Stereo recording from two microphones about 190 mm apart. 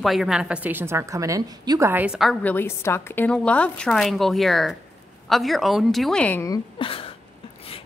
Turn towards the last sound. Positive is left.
turn(degrees=30)  # may be behind; listen again after turning